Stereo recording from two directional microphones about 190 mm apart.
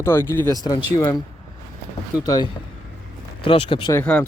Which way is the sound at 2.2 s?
20° left (ahead or behind).